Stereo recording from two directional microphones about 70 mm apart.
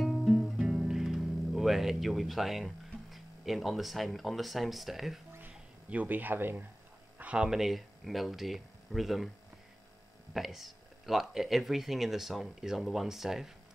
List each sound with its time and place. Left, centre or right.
0.0 s music: centre
5.9 s speech: right
7.2 s a sound: centre
7.4 s speech: centre
10.3 s speech: centre